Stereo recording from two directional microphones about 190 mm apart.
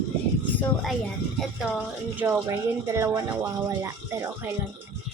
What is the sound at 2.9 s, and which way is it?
Speech, 15° right (ahead or behind).